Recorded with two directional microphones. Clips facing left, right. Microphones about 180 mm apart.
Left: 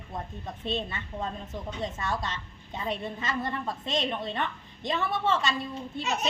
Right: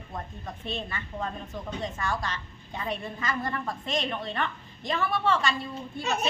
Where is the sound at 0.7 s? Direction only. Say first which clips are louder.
Left 3 dB; 25° left (ahead or behind).